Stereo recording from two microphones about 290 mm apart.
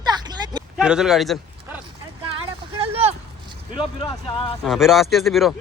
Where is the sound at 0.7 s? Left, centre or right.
Centre.